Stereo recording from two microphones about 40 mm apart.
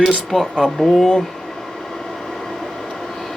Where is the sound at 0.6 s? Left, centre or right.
Centre.